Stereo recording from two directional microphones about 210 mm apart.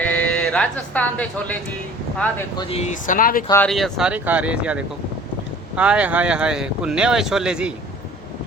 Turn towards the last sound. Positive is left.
turn(degrees=-5)  # may be behind; listen again after turning